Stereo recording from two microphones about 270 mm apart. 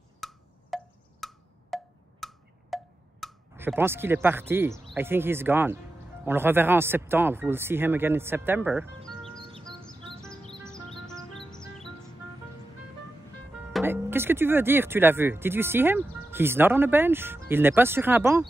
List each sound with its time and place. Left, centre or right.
0.2 s wood block: centre
4.8 s speech: centre
10.7 s music: centre
13.7 s speech: centre